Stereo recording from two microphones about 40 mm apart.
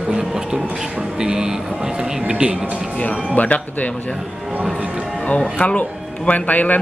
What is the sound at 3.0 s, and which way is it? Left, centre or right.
Speech, left.